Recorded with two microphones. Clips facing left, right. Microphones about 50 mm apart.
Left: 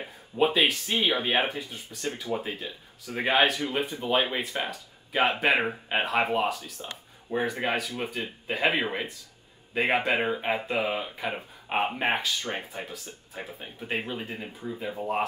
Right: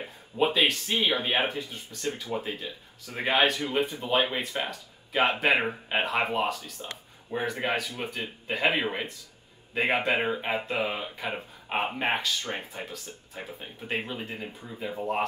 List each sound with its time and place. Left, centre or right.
0.0 s speech: centre